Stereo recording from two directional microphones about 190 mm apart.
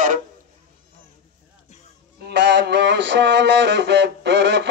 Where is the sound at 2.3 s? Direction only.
65° right (ahead or behind).